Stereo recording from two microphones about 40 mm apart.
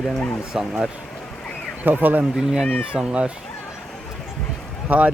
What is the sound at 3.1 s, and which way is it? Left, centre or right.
Speech, right.